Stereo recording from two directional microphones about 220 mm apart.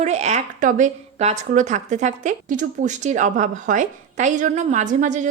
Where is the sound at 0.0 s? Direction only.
30° right (ahead or behind).